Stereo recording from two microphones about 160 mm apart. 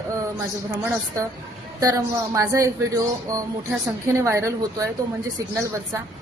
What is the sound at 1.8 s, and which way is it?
A woman's voice, 20° right (ahead or behind).